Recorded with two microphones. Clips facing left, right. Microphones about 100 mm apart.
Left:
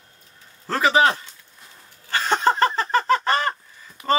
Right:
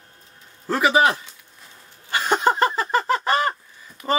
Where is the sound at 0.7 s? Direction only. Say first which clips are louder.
Even; 10° right (ahead or behind).